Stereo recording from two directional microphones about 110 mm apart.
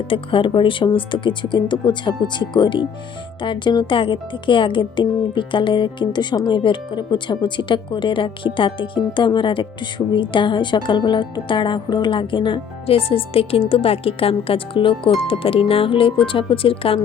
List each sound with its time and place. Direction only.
0.1 s speech: 50° left (ahead or behind)